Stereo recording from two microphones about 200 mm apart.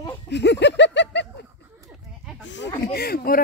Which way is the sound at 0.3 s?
60° left (ahead or behind).